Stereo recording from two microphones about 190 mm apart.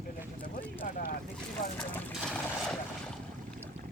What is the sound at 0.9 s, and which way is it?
Boat, 50° left (ahead or behind).